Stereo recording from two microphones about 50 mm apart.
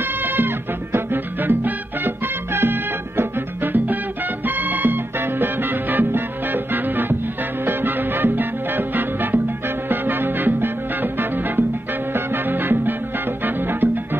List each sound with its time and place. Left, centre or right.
0.0 s music: right
7.6 s salsa music: right
9.8 s music: right
13.4 s salsa music: right